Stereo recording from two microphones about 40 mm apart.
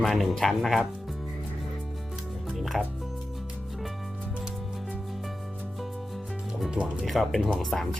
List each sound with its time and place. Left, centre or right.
0.0 s speech: centre
2.6 s music: centre
6.7 s speech: right
7.0 s speech: centre